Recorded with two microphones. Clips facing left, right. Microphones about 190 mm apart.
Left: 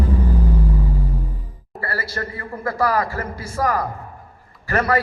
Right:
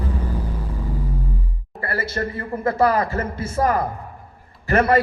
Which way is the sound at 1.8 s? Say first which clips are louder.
Right 2 dB; 20° right (ahead or behind).